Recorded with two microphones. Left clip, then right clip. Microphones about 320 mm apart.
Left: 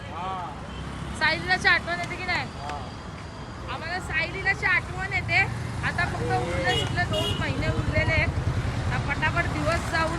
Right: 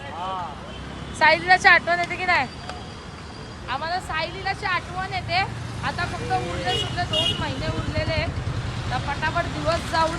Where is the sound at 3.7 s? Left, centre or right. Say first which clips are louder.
Right 5 dB; centre.